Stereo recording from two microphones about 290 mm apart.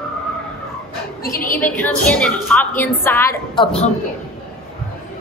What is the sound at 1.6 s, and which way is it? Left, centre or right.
A woman's voice, centre.